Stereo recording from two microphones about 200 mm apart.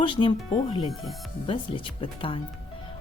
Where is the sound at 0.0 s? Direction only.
25° left (ahead or behind).